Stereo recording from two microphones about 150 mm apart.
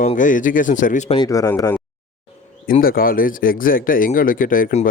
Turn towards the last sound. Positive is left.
turn(degrees=65)  # may be behind; listen again after turning